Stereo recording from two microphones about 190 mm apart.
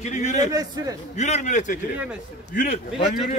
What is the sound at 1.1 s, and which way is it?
A man's voice, 35° left (ahead or behind).